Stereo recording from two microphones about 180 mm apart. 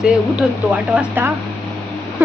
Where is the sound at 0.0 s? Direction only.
5° right (ahead or behind).